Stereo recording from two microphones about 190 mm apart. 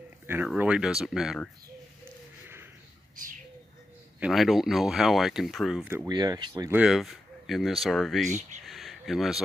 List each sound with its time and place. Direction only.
0.3 s speech: 10° right (ahead or behind)
4.2 s speech: centre (ahead or behind)
6.1 s speech: 20° right (ahead or behind); by 8.3 s centre (ahead or behind)
8.3 s speech: 40° right (ahead or behind)
8.6 s a sound: centre (ahead or behind)